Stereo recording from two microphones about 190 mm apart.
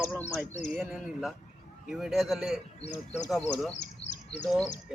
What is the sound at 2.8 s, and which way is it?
Speech, 35° left (ahead or behind).